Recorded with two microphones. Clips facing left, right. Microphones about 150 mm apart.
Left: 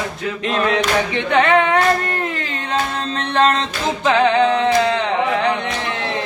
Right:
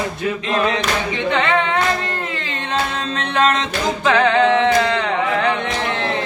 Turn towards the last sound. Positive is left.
turn(degrees=20)  # may be behind; listen again after turning